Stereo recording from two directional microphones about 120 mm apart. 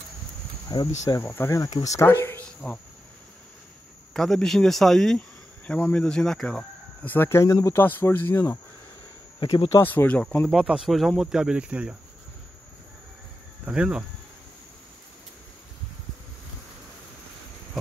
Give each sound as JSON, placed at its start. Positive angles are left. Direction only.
{"t": 0.7, "sound": "speech", "side_deg": 30}
{"t": 2.4, "sound": "cricket", "side_deg": 10}
{"t": 4.1, "sound": "speech", "side_deg": 5}
{"t": 9.4, "sound": "speech", "side_deg": 40}
{"t": 9.7, "sound": "speech", "side_deg": 20}
{"t": 10.5, "sound": "speech", "side_deg": -5}
{"t": 13.7, "sound": "speech", "side_deg": -10}